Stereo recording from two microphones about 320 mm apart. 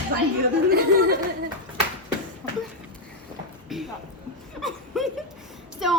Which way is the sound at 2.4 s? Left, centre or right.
Centre.